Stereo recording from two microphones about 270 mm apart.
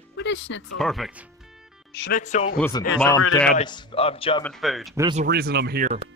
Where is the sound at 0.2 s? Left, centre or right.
Left.